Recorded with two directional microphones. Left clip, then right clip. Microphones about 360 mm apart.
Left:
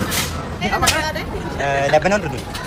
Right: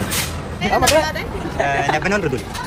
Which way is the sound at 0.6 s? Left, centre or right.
Centre.